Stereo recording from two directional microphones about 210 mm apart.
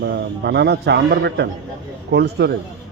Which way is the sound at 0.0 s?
50° right (ahead or behind).